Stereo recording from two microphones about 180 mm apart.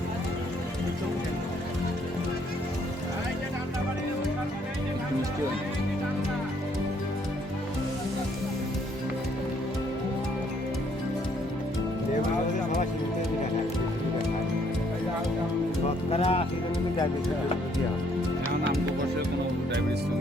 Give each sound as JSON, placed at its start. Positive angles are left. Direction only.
{"t": 16.0, "sound": "music", "side_deg": 35}